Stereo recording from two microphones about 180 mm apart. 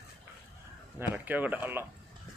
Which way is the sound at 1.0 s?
10° right (ahead or behind).